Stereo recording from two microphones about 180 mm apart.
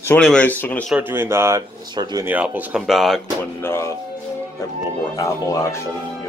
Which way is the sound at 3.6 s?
15° left (ahead or behind).